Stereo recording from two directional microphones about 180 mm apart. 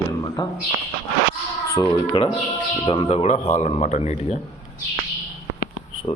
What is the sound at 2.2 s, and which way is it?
A man's voice, 30° left (ahead or behind).